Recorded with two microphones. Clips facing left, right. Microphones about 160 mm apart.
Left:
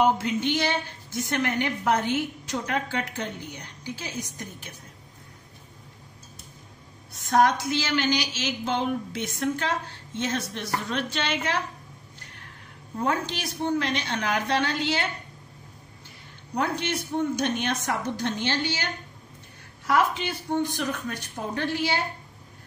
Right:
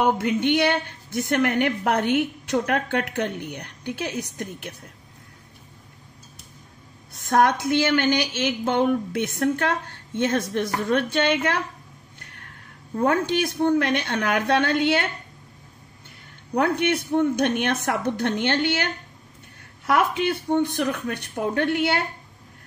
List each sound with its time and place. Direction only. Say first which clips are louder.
0.0 s a woman's voice: right 2 dB; 60° right (ahead or behind)
7.2 s a woman's voice: right 2 dB; 60° right (ahead or behind)
12.9 s a woman's voice: right 6 dB; 50° right (ahead or behind)
16.5 s a woman's voice: right 6 dB; 60° right (ahead or behind)
19.9 s a woman's voice: right 3 dB; 60° right (ahead or behind)